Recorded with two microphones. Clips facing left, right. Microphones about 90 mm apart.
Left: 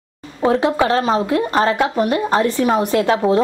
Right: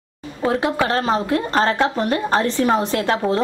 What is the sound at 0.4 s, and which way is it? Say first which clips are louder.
A woman's voice: left 4 dB; 20° left (ahead or behind).